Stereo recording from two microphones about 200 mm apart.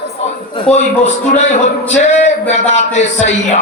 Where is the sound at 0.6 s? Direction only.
35° left (ahead or behind).